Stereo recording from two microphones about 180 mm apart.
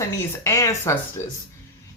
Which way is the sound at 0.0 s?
15° left (ahead or behind).